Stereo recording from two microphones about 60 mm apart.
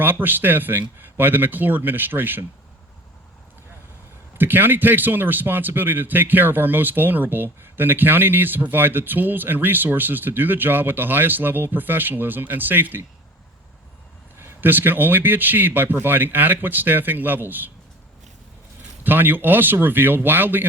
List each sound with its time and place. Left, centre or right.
0.0 s a man's voice: right
4.4 s a man's voice: right
14.3 s a man's voice: right
19.0 s a man's voice: right